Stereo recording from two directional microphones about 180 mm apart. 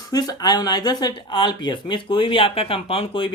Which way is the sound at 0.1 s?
20° left (ahead or behind).